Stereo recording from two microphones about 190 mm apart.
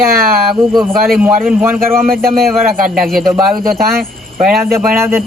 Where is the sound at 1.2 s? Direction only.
10° right (ahead or behind).